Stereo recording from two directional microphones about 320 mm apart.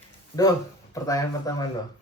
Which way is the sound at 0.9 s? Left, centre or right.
Centre.